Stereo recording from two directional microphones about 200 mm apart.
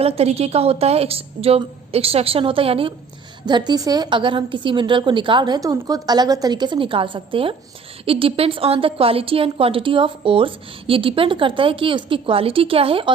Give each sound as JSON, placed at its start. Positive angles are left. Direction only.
{"t": 0.0, "sound": "a woman's voice", "side_deg": -30}